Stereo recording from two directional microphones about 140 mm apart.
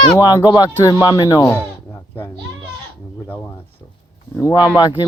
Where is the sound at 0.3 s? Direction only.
25° left (ahead or behind).